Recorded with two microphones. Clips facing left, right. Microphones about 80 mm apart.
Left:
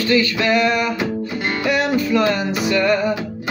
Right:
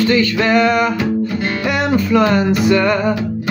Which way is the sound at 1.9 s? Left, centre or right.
Right.